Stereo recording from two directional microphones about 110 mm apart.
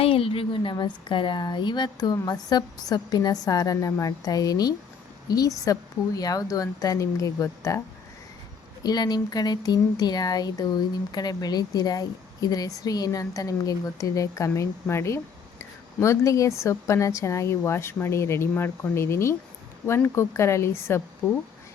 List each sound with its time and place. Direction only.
0.0 s speech: 55° left (ahead or behind); by 7.8 s 30° left (ahead or behind)
8.8 s speech: 40° left (ahead or behind)